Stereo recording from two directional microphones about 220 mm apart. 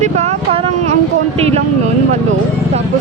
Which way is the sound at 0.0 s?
30° right (ahead or behind).